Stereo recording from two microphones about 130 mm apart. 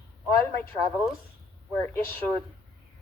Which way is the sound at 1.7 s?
15° left (ahead or behind).